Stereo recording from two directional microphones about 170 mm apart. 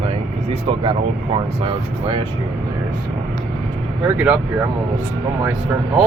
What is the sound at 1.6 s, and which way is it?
Speech, 30° right (ahead or behind).